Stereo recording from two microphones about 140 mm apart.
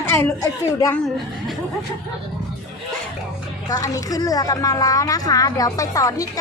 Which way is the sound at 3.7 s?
25° left (ahead or behind).